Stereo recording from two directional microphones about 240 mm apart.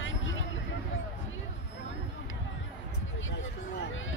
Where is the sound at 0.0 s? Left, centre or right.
Left.